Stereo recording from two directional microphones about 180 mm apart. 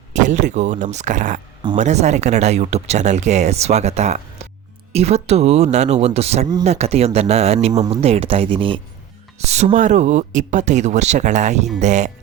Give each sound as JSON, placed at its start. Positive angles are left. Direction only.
{"t": 0.1, "sound": "speech", "side_deg": -40}